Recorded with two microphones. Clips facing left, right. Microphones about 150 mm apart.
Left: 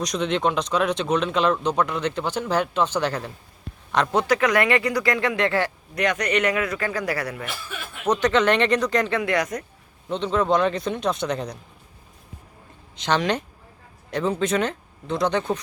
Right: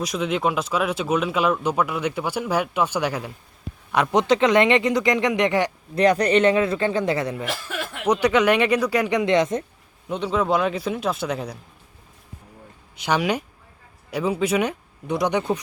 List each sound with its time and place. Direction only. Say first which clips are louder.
0.0 s speech: even; 5° right (ahead or behind)
5.9 s speech: right 7 dB; 30° right (ahead or behind)
7.4 s speech: right 5 dB; 90° right
8.0 s speech: right 1 dB; 10° right (ahead or behind)
10.1 s a man's voice: even; 10° right (ahead or behind)
13.0 s speech: even; 10° right (ahead or behind)